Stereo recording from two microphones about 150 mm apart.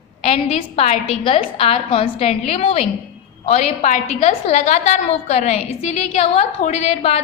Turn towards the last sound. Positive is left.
turn(degrees=50)  # may be behind; listen again after turning